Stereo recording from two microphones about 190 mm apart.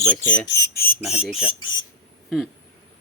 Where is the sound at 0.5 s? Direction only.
55° left (ahead or behind).